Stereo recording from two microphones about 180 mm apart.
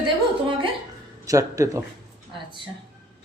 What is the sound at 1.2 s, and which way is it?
Speech, 15° right (ahead or behind).